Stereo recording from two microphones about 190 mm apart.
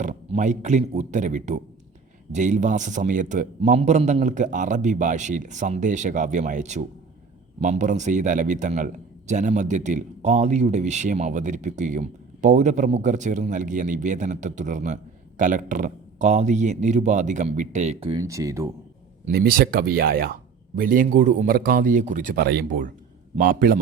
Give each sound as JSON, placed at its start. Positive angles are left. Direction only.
{"t": 0.0, "sound": "speech", "side_deg": -40}
{"t": 18.1, "sound": "speech", "side_deg": -15}
{"t": 19.2, "sound": "a man's voice", "side_deg": -50}